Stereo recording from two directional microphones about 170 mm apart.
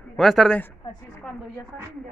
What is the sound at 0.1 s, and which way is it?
Speech, centre (ahead or behind).